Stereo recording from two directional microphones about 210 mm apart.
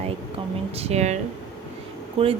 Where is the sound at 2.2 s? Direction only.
25° right (ahead or behind).